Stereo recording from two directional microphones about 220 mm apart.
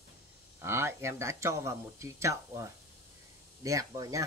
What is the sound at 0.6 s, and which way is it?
Speech, 10° right (ahead or behind).